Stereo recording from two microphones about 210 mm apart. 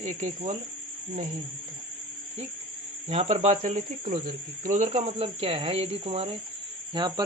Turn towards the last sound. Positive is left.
turn(degrees=-20)  # may be behind; listen again after turning